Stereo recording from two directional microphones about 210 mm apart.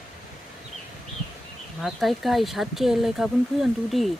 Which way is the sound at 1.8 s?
Centre (ahead or behind).